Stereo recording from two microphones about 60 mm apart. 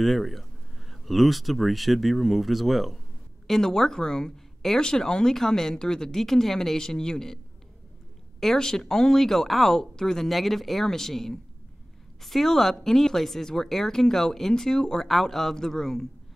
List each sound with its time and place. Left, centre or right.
0.0 s speech: centre
8.4 s speech: centre